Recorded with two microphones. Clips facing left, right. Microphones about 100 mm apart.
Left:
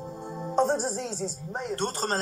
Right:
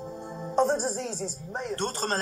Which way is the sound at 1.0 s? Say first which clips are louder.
Left 1 dB; 15° left (ahead or behind).